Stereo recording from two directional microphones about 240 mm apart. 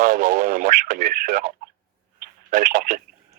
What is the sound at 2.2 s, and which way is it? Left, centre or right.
Telephone, right.